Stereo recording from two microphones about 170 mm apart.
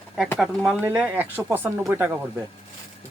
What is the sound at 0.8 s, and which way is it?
Speech, 10° right (ahead or behind).